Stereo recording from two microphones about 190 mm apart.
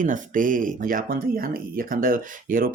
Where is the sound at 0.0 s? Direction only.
45° right (ahead or behind).